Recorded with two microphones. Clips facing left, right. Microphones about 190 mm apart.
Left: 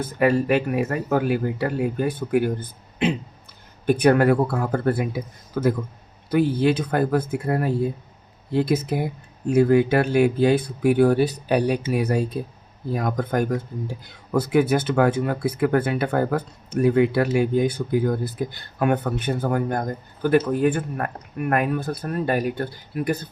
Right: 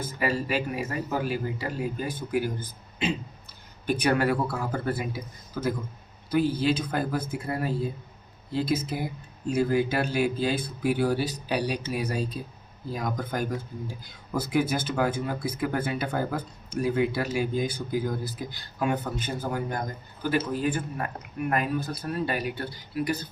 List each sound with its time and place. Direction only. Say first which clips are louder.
0.0 s speech: left 8 dB; 55° left (ahead or behind)